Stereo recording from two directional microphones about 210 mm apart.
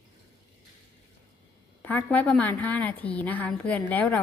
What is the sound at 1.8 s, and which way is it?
A woman's voice, 10° left (ahead or behind).